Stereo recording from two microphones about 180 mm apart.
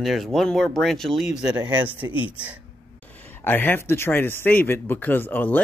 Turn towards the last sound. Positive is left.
turn(degrees=10)  # may be behind; listen again after turning